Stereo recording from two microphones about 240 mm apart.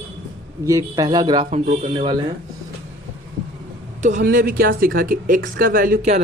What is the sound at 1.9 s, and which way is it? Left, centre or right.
Speech, right.